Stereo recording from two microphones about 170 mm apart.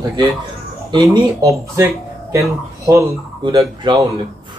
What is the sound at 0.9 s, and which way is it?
Speech, 20° right (ahead or behind).